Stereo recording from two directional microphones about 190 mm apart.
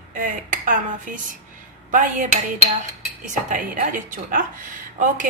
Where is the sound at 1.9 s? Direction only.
40° right (ahead or behind).